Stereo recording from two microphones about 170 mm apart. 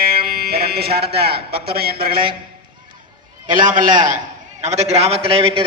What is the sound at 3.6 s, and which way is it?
Speech, 50° right (ahead or behind).